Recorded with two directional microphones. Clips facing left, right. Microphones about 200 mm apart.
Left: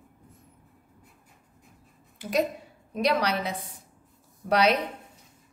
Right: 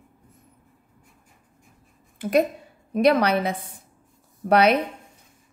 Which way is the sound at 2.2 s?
55° right (ahead or behind).